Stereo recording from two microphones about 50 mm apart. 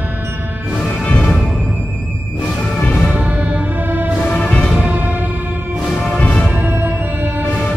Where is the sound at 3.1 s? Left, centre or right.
Right.